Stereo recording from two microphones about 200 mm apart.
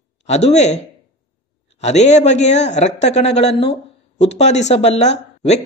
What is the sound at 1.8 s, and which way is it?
Speech, 35° left (ahead or behind).